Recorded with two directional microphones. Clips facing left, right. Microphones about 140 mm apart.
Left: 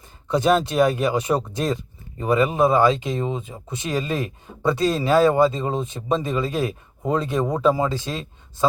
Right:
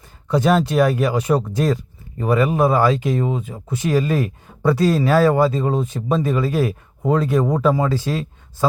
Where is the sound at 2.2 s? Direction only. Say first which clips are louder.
Right 1 dB; 20° left (ahead or behind).